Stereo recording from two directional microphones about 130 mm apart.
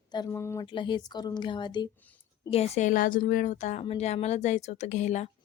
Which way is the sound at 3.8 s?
55° left (ahead or behind).